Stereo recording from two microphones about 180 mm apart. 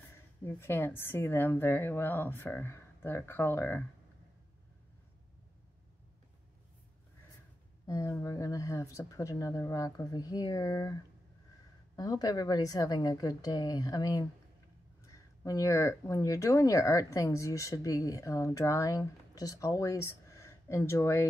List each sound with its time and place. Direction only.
0.5 s speech: 15° left (ahead or behind)
7.8 s speech: 20° left (ahead or behind)